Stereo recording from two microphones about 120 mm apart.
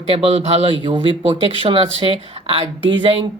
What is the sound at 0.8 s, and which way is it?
A woman's voice, 40° right (ahead or behind).